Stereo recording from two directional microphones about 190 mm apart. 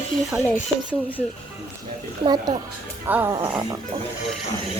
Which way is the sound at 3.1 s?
10° right (ahead or behind).